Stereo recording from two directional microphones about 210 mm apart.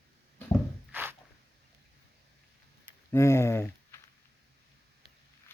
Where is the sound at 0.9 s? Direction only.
10° right (ahead or behind).